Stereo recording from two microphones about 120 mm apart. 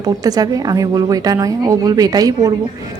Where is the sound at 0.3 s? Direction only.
30° right (ahead or behind).